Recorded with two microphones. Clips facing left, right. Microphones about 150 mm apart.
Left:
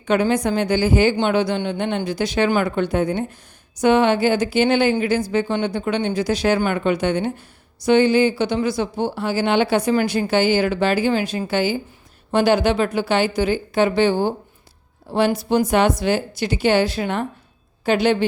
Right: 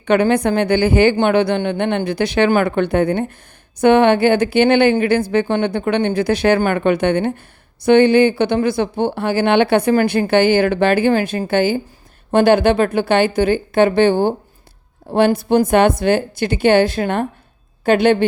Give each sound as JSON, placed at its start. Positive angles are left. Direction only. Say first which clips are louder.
{"t": 0.0, "sound": "a woman's voice", "louder": "right 4 dB", "side_deg": -60}